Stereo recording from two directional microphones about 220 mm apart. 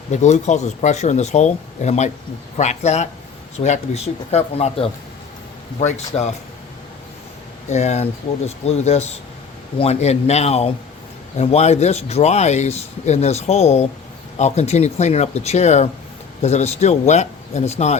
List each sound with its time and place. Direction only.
0.1 s speech: 30° left (ahead or behind)
7.7 s speech: 30° left (ahead or behind)